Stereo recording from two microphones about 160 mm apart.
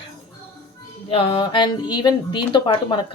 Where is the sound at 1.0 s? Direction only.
35° left (ahead or behind).